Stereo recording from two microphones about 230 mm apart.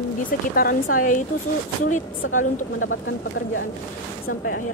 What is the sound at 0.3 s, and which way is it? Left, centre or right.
Speech, left.